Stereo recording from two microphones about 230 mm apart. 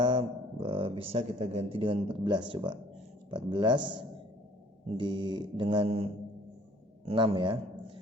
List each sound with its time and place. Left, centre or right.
0.0 s a man's voice: right